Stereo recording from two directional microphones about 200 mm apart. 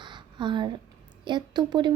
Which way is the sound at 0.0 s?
25° right (ahead or behind).